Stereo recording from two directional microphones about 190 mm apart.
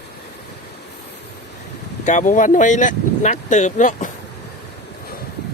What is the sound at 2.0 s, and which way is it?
Speech, 40° left (ahead or behind).